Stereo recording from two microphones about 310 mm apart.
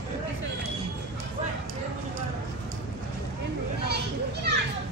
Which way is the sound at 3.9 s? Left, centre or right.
Right.